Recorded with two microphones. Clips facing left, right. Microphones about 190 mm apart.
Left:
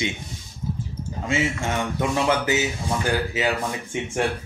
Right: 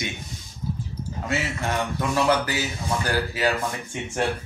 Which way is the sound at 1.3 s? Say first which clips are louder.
Left 3 dB; 25° left (ahead or behind).